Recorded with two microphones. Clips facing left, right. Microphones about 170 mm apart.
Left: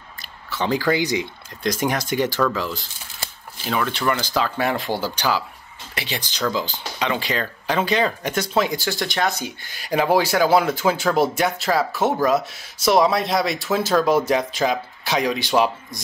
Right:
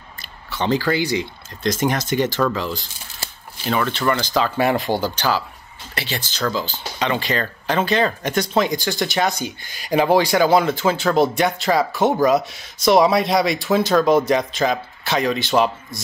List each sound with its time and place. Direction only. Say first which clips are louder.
0.5 s a sound: right 2 dB; centre (ahead or behind)
0.7 s speech: left 1 dB; 15° left (ahead or behind)
3.7 s speech: right 2 dB; 5° left (ahead or behind)